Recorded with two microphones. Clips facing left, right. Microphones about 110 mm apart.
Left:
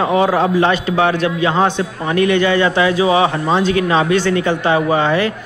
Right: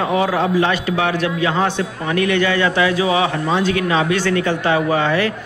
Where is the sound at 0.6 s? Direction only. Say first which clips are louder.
Left 3 dB; 30° left (ahead or behind).